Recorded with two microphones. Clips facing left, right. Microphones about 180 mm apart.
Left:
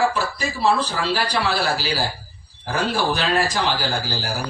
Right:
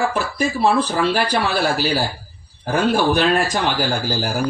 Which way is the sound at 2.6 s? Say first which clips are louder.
Right 5 dB; 50° right (ahead or behind).